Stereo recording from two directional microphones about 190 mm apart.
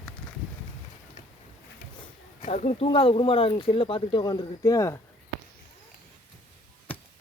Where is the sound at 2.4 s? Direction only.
40° left (ahead or behind).